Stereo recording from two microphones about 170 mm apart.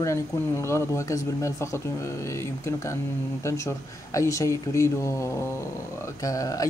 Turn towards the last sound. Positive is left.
turn(degrees=20)  # may be behind; listen again after turning